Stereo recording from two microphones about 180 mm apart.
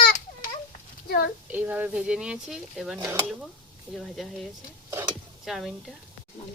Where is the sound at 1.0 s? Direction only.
60° left (ahead or behind).